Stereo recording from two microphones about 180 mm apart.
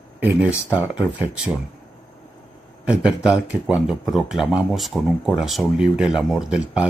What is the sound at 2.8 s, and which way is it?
Speech, 5° right (ahead or behind).